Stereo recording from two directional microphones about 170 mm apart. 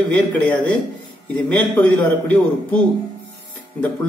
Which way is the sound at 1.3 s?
10° left (ahead or behind).